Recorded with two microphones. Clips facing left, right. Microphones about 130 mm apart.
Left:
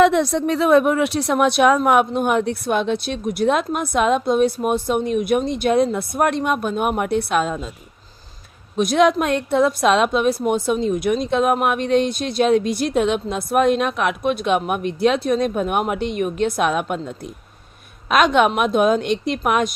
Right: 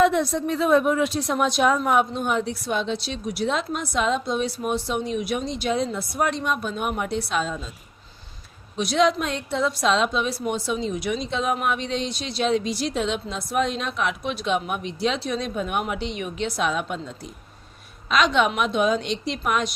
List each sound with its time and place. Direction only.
0.0 s speech: 80° left; by 7.7 s 55° left (ahead or behind)
8.7 s a woman's voice: 50° left (ahead or behind)